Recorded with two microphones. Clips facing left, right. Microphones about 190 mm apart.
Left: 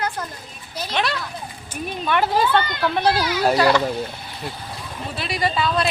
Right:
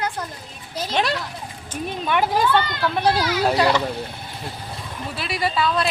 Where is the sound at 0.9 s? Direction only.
40° right (ahead or behind).